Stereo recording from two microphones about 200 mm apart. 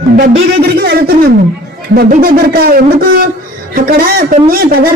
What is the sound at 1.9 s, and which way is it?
A woman's voice, 50° right (ahead or behind).